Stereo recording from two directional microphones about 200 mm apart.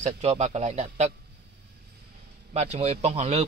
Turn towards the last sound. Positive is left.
turn(degrees=-35)  # may be behind; listen again after turning